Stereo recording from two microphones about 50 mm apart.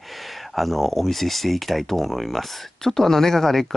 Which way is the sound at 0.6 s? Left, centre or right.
Centre.